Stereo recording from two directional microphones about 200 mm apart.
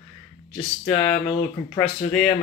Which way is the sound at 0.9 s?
30° left (ahead or behind).